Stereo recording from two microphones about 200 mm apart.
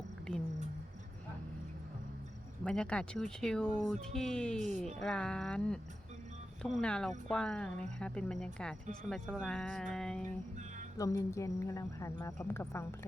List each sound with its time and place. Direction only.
2.6 s speech: 5° left (ahead or behind)
10.9 s a woman's voice: 15° left (ahead or behind)